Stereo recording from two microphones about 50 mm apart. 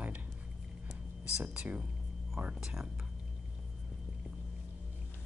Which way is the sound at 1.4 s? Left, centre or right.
Right.